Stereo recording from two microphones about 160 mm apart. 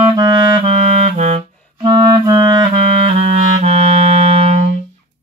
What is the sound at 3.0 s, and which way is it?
Clarinet, 40° right (ahead or behind).